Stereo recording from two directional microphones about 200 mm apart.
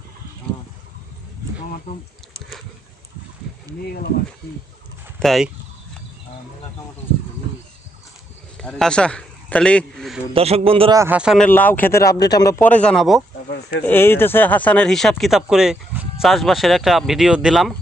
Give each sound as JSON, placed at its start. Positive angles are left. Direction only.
{"t": 1.9, "sound": "speech", "side_deg": 50}
{"t": 5.2, "sound": "speech", "side_deg": 0}
{"t": 8.5, "sound": "a man's voice", "side_deg": 5}
{"t": 10.3, "sound": "a man's voice", "side_deg": -30}
{"t": 10.9, "sound": "speech", "side_deg": -10}
{"t": 11.4, "sound": "speech", "side_deg": 10}
{"t": 13.5, "sound": "a sound", "side_deg": 55}
{"t": 13.8, "sound": "speech", "side_deg": 10}